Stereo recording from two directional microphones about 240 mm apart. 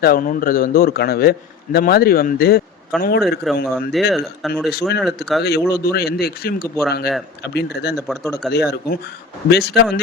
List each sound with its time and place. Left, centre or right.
0.0 s a man's voice: left
3.4 s speech: centre
5.4 s a man's voice: left
7.9 s speech: centre
8.2 s a man's voice: centre
8.5 s a man's voice: left